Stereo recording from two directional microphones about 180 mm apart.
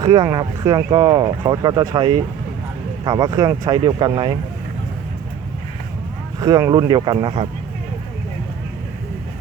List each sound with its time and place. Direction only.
0.0 s speech: 20° right (ahead or behind)
6.4 s speech: 20° right (ahead or behind)